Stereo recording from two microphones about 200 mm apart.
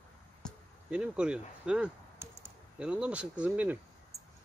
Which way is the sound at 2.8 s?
5° right (ahead or behind).